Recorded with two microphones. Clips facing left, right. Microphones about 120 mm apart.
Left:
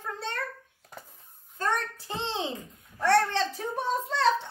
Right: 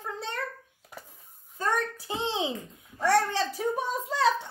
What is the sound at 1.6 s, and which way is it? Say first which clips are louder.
A child's voice: right 1 dB; 10° right (ahead or behind).